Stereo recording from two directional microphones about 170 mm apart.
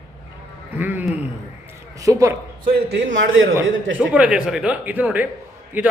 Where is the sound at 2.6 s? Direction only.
55° right (ahead or behind).